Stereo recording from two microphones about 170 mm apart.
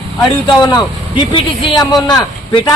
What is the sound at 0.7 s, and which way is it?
A man's voice, 25° left (ahead or behind).